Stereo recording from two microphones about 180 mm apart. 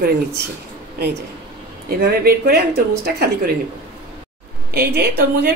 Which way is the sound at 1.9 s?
60° right (ahead or behind).